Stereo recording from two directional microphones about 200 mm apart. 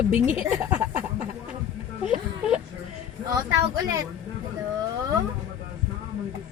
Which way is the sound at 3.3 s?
15° right (ahead or behind).